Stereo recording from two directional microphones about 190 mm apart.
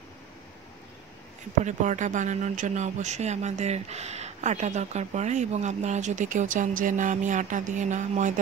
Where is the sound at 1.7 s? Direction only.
40° right (ahead or behind).